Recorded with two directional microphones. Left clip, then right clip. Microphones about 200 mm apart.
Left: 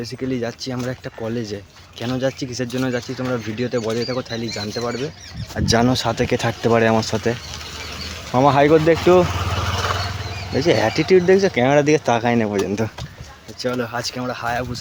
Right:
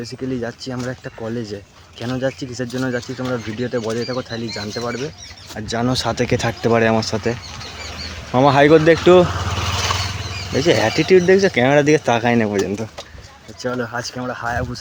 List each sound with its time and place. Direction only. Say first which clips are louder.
0.0 s speech: left 1 dB; centre (ahead or behind)
5.5 s speech: left 6 dB; 40° left (ahead or behind)
5.9 s speech: even; centre (ahead or behind)
9.8 s vehicle: right 2 dB; 30° right (ahead or behind)
10.5 s speech: right 1 dB; 5° right (ahead or behind)